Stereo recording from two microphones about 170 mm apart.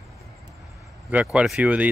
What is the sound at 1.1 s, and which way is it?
Speech, 5° right (ahead or behind).